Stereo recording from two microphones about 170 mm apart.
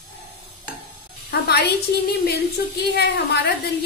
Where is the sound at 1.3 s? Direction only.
75° left (ahead or behind).